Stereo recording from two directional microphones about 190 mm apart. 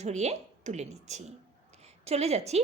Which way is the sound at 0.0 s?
35° right (ahead or behind).